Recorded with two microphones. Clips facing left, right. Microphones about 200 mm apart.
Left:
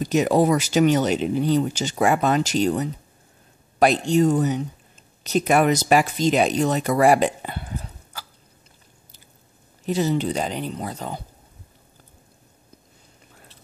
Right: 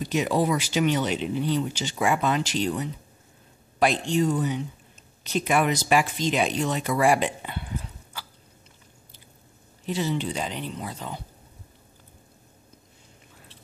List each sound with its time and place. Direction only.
0.0 s speech: 45° left (ahead or behind)
9.8 s speech: 40° left (ahead or behind)